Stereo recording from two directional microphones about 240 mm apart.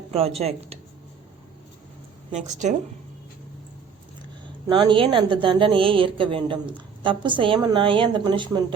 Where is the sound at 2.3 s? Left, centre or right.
Right.